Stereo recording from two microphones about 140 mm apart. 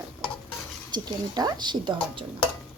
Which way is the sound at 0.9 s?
30° right (ahead or behind).